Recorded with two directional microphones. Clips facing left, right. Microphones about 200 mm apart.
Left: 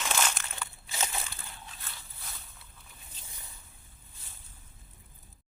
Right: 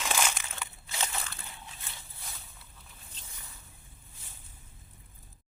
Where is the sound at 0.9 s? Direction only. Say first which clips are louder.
Even; 10° left (ahead or behind).